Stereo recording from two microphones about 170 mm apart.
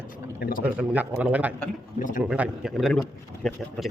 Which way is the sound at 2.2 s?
5° right (ahead or behind).